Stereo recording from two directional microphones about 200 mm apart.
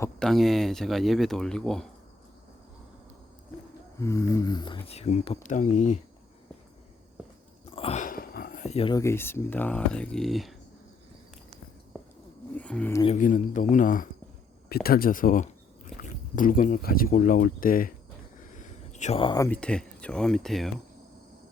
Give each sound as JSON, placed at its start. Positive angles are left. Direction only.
{"t": 0.0, "sound": "speech", "side_deg": 5}
{"t": 4.0, "sound": "speech", "side_deg": 15}
{"t": 7.6, "sound": "a sound", "side_deg": 30}
{"t": 8.0, "sound": "a sound", "side_deg": 45}
{"t": 8.6, "sound": "speech", "side_deg": 30}
{"t": 9.0, "sound": "speech", "side_deg": 10}
{"t": 12.5, "sound": "speech", "side_deg": 5}
{"t": 13.1, "sound": "speech", "side_deg": 40}
{"t": 18.3, "sound": "a sound", "side_deg": 40}
{"t": 19.5, "sound": "speech", "side_deg": 5}